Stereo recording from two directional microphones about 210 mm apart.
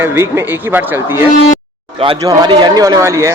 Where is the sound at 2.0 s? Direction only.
20° right (ahead or behind).